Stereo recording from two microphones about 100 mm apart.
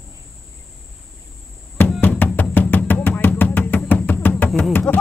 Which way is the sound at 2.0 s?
20° left (ahead or behind).